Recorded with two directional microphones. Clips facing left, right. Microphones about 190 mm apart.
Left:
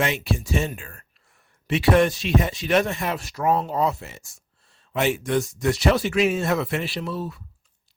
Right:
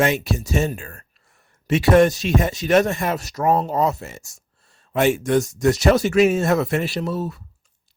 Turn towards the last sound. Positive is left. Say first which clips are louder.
# right 4 dB
turn(degrees=-45)  # may be behind; listen again after turning